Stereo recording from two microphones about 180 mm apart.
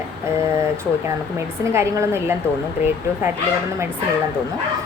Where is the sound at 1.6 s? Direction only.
15° right (ahead or behind).